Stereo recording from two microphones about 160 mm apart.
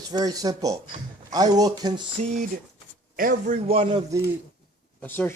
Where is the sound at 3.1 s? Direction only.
60° right (ahead or behind).